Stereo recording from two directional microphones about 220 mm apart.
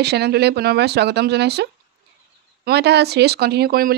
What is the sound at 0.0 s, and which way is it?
Speech, 50° right (ahead or behind).